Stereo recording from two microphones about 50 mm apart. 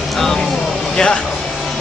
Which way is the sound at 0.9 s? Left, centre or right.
Centre.